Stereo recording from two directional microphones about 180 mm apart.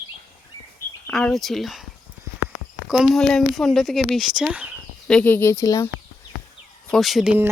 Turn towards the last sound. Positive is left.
turn(degrees=-5)  # may be behind; listen again after turning